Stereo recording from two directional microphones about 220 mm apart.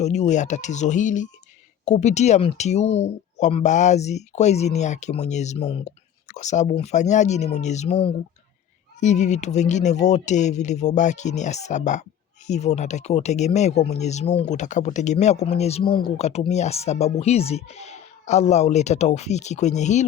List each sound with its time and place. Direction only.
0.0 s speech: 30° left (ahead or behind)
9.0 s speech: 30° left (ahead or behind)